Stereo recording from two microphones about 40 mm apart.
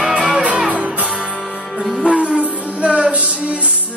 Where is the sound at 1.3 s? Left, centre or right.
Centre.